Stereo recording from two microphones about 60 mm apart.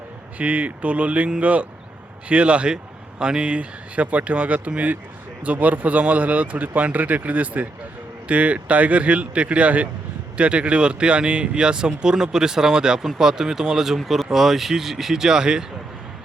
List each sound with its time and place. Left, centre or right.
0.3 s speech: right